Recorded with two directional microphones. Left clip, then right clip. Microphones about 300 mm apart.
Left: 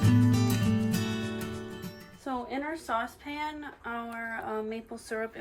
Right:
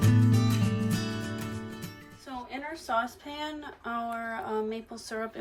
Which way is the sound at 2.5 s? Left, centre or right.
Centre.